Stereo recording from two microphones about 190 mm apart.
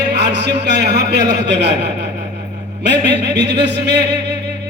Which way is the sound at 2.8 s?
65° right (ahead or behind).